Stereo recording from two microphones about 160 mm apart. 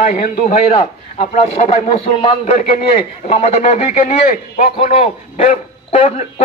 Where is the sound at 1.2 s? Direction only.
45° left (ahead or behind).